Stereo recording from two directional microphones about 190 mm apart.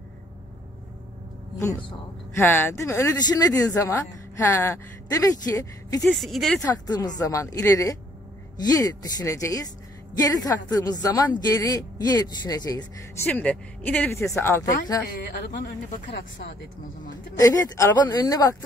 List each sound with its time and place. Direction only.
2.3 s speech: 10° left (ahead or behind)
6.0 s speech: centre (ahead or behind)
6.6 s speech: 20° left (ahead or behind)
13.3 s speech: 5° left (ahead or behind)
15.5 s speech: 60° left (ahead or behind)
17.4 s speech: 15° left (ahead or behind)